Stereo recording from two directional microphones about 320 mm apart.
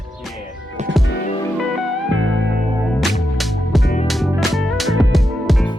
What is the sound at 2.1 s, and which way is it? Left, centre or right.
Music, right.